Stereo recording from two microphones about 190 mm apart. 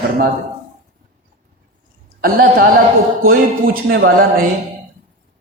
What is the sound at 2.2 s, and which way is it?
Speech, 50° right (ahead or behind).